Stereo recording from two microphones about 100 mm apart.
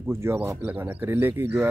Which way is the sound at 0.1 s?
25° right (ahead or behind).